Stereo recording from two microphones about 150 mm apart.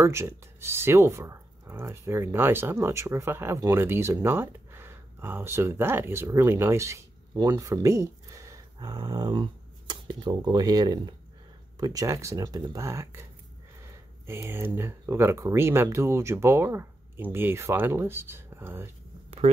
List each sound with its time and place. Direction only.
0.0 s speech: 15° right (ahead or behind)
19.4 s speech: 45° right (ahead or behind)